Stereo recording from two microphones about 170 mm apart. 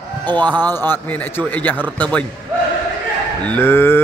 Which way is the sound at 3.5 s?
10° left (ahead or behind).